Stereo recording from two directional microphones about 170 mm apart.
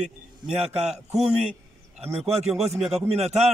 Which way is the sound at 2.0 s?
35° right (ahead or behind).